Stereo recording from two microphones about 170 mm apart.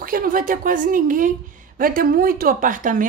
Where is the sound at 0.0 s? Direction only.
55° right (ahead or behind).